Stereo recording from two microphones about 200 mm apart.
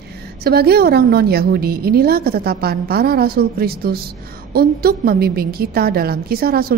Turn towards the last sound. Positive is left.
turn(degrees=-50)  # may be behind; listen again after turning